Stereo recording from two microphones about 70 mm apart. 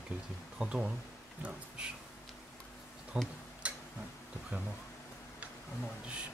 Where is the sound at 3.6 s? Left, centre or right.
Centre.